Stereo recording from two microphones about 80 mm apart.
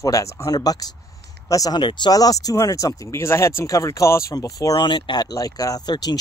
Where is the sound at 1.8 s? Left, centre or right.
Left.